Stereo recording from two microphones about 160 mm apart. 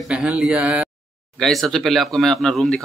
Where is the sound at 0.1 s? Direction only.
5° right (ahead or behind).